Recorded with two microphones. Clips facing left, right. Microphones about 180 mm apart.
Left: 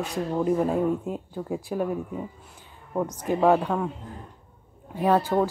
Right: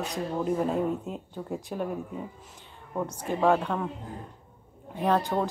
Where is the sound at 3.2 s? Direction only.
15° left (ahead or behind).